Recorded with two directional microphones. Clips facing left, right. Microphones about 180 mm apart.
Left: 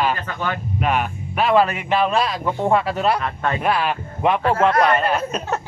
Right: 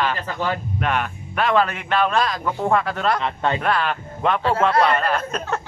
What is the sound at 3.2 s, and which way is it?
Speech, 25° right (ahead or behind).